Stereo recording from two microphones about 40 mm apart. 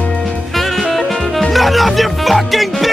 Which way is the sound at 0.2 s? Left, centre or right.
Centre.